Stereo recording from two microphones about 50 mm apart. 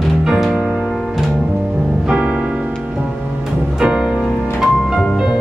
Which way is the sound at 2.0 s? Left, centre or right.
Centre.